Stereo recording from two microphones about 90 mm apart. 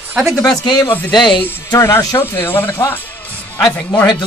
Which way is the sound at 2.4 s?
25° left (ahead or behind).